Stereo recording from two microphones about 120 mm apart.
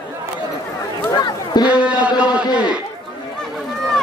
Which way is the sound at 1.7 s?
10° right (ahead or behind).